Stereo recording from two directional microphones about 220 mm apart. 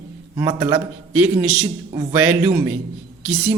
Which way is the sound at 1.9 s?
25° right (ahead or behind).